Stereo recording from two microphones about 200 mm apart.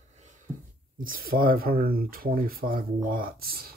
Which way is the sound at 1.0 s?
45° right (ahead or behind).